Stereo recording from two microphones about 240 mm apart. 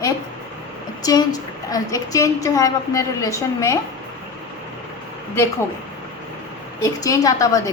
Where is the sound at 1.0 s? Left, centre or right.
Centre.